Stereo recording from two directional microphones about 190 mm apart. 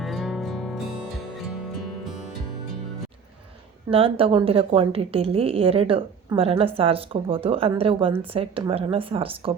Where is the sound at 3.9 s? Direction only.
30° right (ahead or behind).